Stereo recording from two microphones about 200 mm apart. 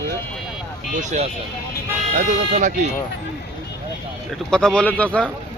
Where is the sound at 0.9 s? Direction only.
35° right (ahead or behind).